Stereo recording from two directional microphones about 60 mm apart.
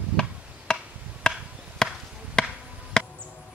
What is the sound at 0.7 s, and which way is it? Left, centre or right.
Chop, centre.